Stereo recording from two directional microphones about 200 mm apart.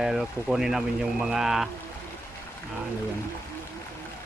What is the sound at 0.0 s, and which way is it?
Speech, centre (ahead or behind).